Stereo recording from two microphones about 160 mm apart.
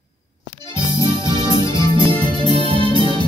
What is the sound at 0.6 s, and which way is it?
Music, 30° right (ahead or behind).